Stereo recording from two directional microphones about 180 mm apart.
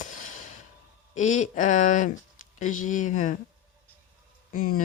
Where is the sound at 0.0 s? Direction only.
45° left (ahead or behind).